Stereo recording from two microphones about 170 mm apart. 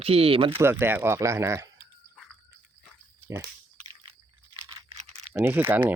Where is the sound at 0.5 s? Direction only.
15° right (ahead or behind).